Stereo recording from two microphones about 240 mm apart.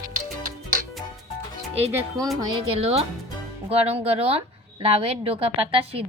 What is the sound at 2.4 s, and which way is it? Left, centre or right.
A woman's voice, right.